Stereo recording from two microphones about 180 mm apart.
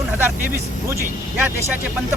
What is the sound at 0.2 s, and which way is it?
Speech, 15° right (ahead or behind).